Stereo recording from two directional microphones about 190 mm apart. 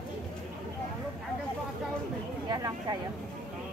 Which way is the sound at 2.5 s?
20° right (ahead or behind).